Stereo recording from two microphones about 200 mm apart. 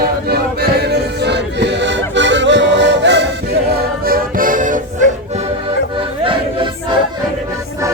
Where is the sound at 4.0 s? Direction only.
45° right (ahead or behind).